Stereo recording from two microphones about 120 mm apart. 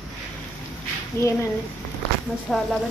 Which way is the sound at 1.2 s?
25° left (ahead or behind).